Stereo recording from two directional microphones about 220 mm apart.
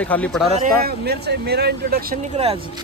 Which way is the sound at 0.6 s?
45° right (ahead or behind).